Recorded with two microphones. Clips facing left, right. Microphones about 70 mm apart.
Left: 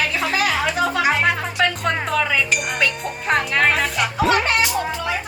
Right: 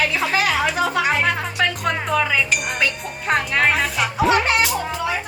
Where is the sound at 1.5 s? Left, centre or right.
Centre.